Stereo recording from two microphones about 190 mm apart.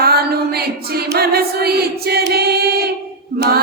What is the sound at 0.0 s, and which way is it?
Music, 55° right (ahead or behind).